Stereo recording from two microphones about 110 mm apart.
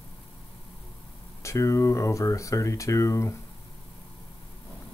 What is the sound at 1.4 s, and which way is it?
Speech, 25° left (ahead or behind).